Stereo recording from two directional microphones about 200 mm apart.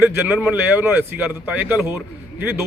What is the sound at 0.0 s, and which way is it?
A man's voice, 5° right (ahead or behind).